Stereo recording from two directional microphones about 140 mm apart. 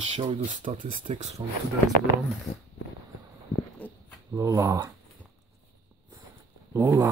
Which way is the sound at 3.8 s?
10° left (ahead or behind).